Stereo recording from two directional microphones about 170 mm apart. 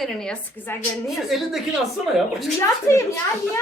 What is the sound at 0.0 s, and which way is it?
A woman's voice, 5° left (ahead or behind).